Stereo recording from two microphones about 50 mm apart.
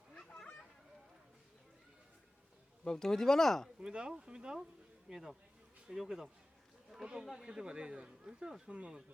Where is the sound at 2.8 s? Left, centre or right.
Centre.